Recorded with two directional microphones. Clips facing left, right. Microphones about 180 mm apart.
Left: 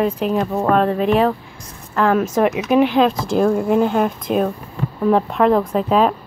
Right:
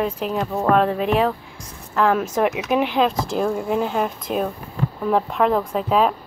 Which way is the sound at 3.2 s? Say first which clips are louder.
Left 6 dB; 50° left (ahead or behind).